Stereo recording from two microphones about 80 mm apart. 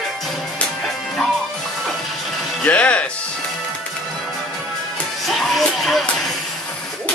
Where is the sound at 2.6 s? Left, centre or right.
Centre.